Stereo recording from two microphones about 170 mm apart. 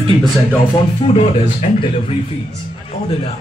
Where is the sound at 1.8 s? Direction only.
30° left (ahead or behind).